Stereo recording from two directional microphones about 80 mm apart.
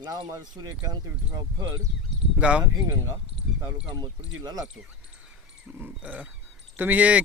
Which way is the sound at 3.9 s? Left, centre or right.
Right.